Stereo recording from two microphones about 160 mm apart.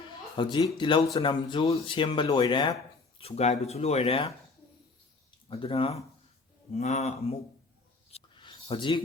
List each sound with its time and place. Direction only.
0.3 s speech: 30° left (ahead or behind)
5.5 s speech: 35° left (ahead or behind)
8.1 s a sound: 30° left (ahead or behind)